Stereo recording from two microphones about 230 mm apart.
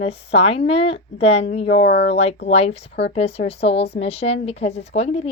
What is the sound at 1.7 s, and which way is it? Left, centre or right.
Speech, left.